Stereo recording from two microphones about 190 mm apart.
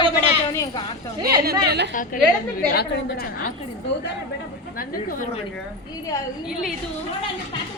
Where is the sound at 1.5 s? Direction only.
60° right (ahead or behind).